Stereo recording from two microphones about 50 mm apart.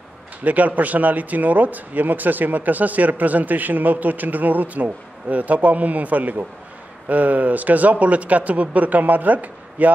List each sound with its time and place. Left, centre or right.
0.4 s speech: right